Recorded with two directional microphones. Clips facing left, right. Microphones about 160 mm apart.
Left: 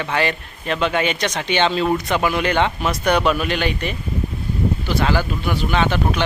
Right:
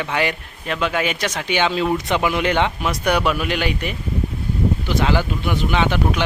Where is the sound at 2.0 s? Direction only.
20° right (ahead or behind).